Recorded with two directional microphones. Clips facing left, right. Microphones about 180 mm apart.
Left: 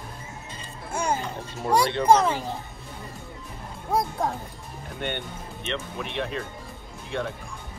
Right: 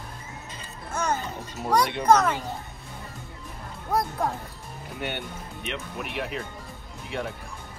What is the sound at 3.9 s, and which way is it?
Speech, centre (ahead or behind).